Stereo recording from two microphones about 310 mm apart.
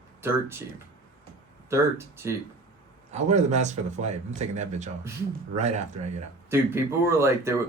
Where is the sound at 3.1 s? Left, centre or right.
Right.